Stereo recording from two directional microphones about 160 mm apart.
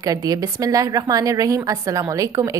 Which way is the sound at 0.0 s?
25° right (ahead or behind).